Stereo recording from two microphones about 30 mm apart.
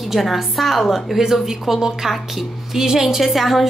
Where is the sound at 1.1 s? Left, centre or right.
Centre.